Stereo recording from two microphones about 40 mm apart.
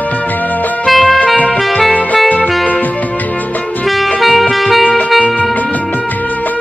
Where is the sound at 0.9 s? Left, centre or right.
Centre.